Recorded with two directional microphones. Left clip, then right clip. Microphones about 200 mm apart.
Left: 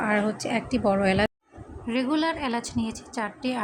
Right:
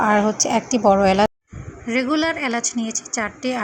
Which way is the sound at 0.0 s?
15° right (ahead or behind).